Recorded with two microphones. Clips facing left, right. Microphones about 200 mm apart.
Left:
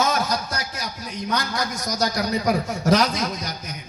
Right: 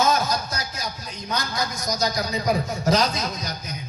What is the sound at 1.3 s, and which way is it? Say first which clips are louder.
A man's voice: left 1 dB; 75° left (ahead or behind).